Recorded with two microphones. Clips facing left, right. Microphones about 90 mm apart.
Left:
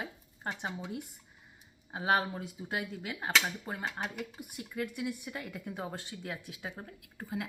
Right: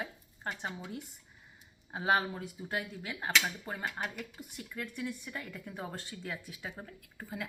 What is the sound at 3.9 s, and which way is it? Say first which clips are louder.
Speech: even; 25° left (ahead or behind).